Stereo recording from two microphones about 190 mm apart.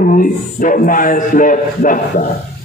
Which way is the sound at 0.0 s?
45° left (ahead or behind).